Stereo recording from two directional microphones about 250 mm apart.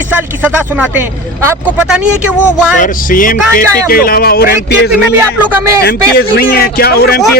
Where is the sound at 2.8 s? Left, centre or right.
Left.